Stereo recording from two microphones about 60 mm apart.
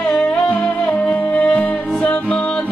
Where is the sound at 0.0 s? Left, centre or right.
Centre.